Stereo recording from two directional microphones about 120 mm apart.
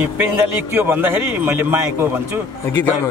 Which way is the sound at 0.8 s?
15° right (ahead or behind).